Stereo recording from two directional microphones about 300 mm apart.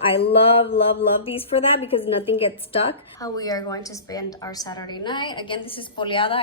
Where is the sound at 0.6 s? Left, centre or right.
Centre.